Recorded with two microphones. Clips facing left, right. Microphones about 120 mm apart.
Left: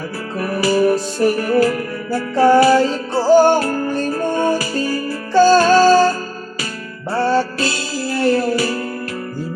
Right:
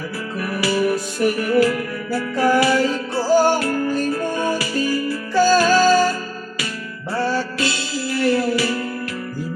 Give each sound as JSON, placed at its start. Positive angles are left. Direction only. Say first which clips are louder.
{"t": 0.3, "sound": "music", "louder": "left 5 dB", "side_deg": 35}
{"t": 3.6, "sound": "music", "louder": "left 1 dB", "side_deg": 35}
{"t": 7.6, "sound": "music", "louder": "left 2 dB", "side_deg": 40}